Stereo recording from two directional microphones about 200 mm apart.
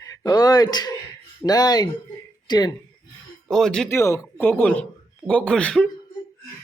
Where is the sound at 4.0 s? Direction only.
15° left (ahead or behind).